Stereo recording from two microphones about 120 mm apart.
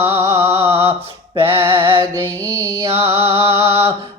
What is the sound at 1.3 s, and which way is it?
Music, 50° right (ahead or behind).